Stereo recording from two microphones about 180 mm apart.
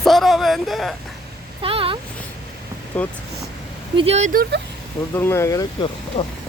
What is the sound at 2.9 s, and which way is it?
Speech, 10° left (ahead or behind).